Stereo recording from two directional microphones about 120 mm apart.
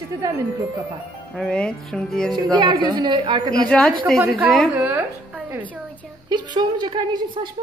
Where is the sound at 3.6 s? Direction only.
10° left (ahead or behind).